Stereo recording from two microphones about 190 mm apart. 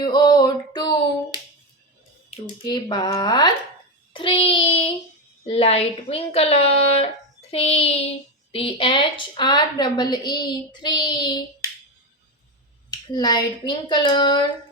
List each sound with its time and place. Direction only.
0.0 s a sound: 20° left (ahead or behind)
2.6 s a woman's voice: 20° left (ahead or behind)
4.1 s child singing: 30° left (ahead or behind)
5.5 s a woman's voice: 30° left (ahead or behind)
12.9 s a woman's voice: 20° left (ahead or behind)